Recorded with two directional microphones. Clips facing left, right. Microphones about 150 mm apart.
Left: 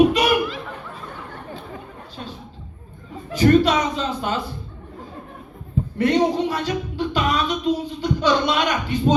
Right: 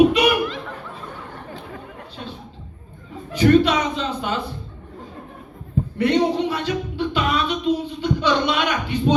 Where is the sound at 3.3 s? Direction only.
40° left (ahead or behind).